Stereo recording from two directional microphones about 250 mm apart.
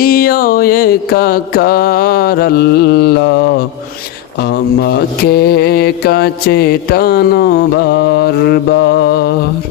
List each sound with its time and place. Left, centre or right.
0.0 s mantra: left
4.8 s mantra: left